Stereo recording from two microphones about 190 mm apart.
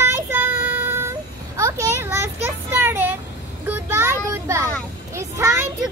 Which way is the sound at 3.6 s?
10° right (ahead or behind).